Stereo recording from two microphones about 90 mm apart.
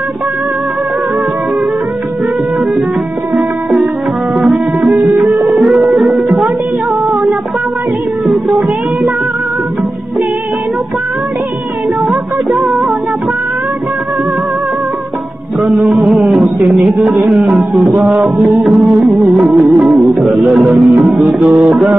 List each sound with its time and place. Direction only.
4.4 s music: 10° right (ahead or behind)
8.3 s music: 5° right (ahead or behind)
12.1 s music of bollywood: centre (ahead or behind)
15.6 s music: centre (ahead or behind)
16.6 s a sound: 5° right (ahead or behind)
17.9 s music: 10° right (ahead or behind)
20.7 s music: 20° right (ahead or behind)
21.3 s music: 10° right (ahead or behind)